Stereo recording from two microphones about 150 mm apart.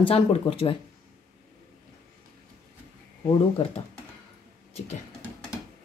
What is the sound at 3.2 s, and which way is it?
Speech, 40° left (ahead or behind).